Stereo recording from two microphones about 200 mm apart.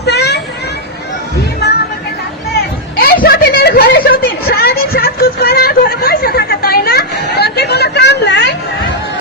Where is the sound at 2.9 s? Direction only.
50° left (ahead or behind).